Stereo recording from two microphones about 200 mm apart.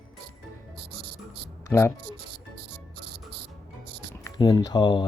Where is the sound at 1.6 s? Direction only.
15° left (ahead or behind).